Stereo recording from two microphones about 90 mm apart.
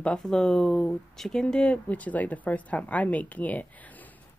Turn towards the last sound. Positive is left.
turn(degrees=15)  # may be behind; listen again after turning